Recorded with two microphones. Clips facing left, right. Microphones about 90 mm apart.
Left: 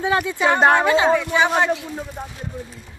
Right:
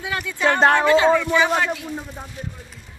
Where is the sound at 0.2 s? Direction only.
15° left (ahead or behind).